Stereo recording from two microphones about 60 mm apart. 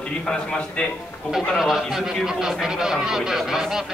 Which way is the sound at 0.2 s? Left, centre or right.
Centre.